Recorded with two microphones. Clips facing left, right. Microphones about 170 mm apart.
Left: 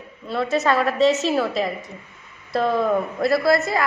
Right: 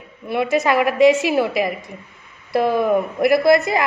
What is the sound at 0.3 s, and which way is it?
A woman's voice, 15° right (ahead or behind).